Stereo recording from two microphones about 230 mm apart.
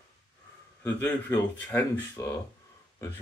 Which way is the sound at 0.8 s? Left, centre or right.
Centre.